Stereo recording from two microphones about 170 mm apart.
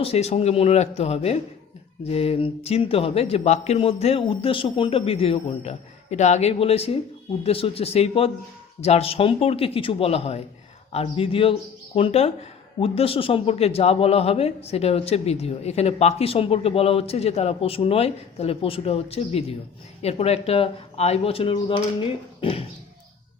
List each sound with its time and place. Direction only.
0.0 s speech: 35° left (ahead or behind)